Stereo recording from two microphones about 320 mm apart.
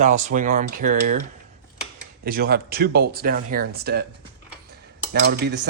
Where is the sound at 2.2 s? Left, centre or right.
Right.